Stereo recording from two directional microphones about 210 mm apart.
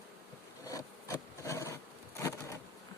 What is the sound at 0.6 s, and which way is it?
Insect, 15° left (ahead or behind).